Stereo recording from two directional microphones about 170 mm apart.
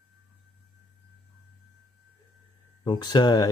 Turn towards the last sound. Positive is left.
turn(degrees=25)  # may be behind; listen again after turning